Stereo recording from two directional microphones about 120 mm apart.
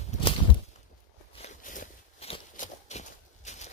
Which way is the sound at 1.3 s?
75° left (ahead or behind).